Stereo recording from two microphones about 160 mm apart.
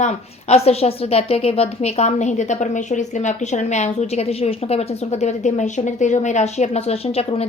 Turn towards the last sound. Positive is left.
turn(degrees=40)  # may be behind; listen again after turning